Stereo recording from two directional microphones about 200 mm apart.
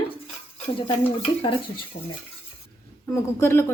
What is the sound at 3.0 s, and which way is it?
Speech, 10° left (ahead or behind).